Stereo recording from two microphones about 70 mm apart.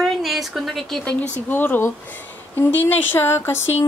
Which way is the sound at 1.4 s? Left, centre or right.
Left.